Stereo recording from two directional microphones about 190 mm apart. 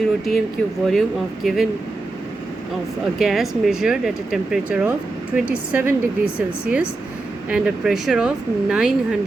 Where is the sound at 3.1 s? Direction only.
Centre (ahead or behind).